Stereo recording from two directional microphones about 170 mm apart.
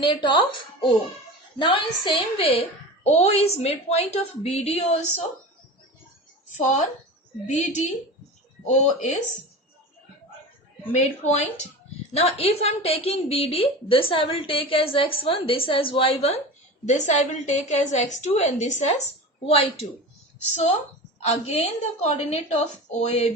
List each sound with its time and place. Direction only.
0.0 s a woman's voice: 25° left (ahead or behind)
6.6 s a woman's voice: 45° left (ahead or behind)
10.9 s a woman's voice: 40° left (ahead or behind)